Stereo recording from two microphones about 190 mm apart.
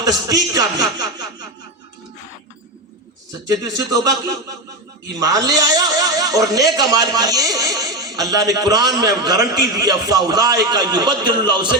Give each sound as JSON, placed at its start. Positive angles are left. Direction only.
{"t": 0.0, "sound": "a man's voice", "side_deg": -20}
{"t": 3.5, "sound": "a man's voice", "side_deg": -20}
{"t": 5.2, "sound": "a man's voice", "side_deg": -20}